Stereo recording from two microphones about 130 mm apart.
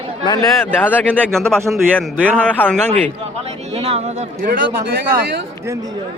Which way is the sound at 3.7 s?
50° right (ahead or behind).